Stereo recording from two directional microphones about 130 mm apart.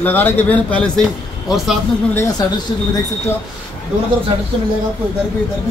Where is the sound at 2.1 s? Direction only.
30° left (ahead or behind).